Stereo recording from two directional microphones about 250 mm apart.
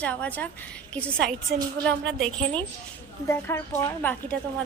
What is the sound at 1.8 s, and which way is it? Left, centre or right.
Speech, right.